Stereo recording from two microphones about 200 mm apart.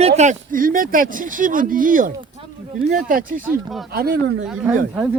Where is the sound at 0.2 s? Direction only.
40° right (ahead or behind).